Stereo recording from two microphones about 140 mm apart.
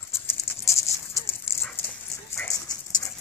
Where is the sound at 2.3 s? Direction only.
20° left (ahead or behind).